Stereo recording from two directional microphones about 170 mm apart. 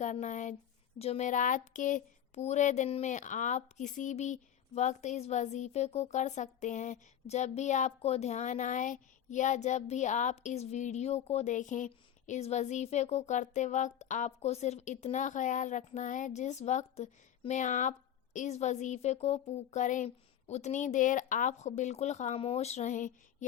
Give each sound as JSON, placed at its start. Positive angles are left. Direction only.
{"t": 0.0, "sound": "speech", "side_deg": 45}